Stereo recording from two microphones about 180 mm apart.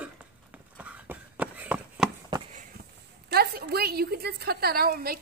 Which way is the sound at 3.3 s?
60° right (ahead or behind).